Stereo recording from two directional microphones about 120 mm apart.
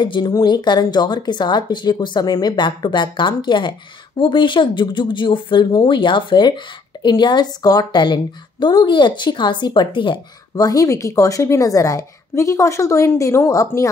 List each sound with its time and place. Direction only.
0.0 s speech: 40° left (ahead or behind)